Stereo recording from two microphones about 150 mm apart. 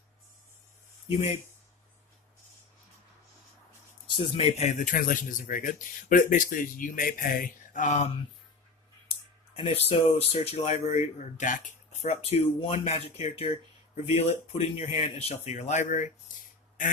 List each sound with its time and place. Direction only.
4.1 s speech: 35° left (ahead or behind); by 7.9 s 60° left (ahead or behind)
9.6 s speech: 45° left (ahead or behind); by 12.1 s 60° left (ahead or behind)
12.2 s speech: 45° left (ahead or behind); by 16.9 s 60° left (ahead or behind)